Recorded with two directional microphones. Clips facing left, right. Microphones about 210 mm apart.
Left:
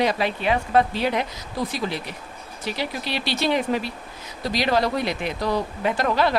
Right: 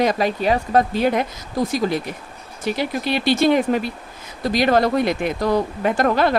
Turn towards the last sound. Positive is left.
turn(degrees=-50)  # may be behind; listen again after turning